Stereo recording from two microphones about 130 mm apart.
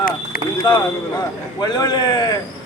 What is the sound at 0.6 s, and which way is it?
A man's voice, 30° left (ahead or behind).